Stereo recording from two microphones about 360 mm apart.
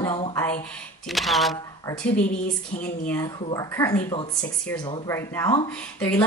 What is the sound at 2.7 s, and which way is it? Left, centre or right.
Speech, left.